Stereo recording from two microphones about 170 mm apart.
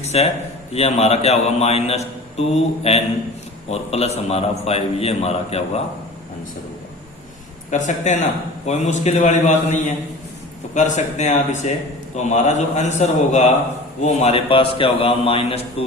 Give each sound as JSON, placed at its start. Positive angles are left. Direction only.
{"t": 0.0, "sound": "a man's voice", "side_deg": 40}
{"t": 7.7, "sound": "a man's voice", "side_deg": 45}
{"t": 10.8, "sound": "a man's voice", "side_deg": 45}